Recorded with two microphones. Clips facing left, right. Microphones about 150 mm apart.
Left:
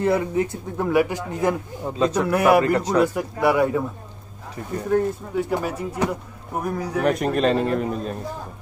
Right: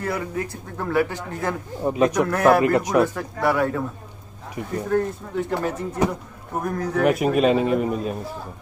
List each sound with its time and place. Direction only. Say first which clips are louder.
0.0 s speech: left 6 dB; 25° left (ahead or behind)
1.8 s a man's voice: right 6 dB; 15° right (ahead or behind)
2.2 s speech: left 3 dB; 10° left (ahead or behind)
2.6 s a man's voice: right 1 dB; 15° right (ahead or behind)
3.0 s speech: left 1 dB; 15° left (ahead or behind)
4.8 s speech: left 3 dB; 10° left (ahead or behind)
7.0 s a man's voice: right 2 dB; 5° right (ahead or behind)